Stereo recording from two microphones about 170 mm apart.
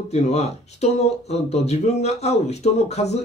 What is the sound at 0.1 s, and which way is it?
Speech, 40° left (ahead or behind).